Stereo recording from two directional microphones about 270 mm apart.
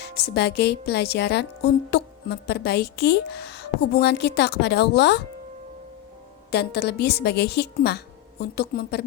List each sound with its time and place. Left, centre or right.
0.0 s a woman's voice: left
6.5 s a woman's voice: left